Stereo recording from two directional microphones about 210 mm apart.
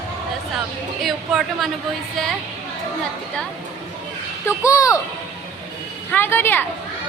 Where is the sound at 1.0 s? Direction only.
Centre (ahead or behind).